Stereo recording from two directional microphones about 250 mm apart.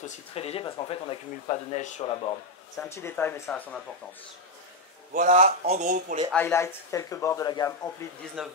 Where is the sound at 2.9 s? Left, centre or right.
Centre.